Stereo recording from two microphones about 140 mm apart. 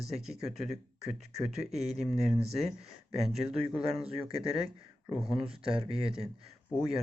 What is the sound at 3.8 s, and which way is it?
Speech, 45° right (ahead or behind).